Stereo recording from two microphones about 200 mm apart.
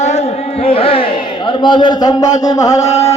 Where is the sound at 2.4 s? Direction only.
20° left (ahead or behind).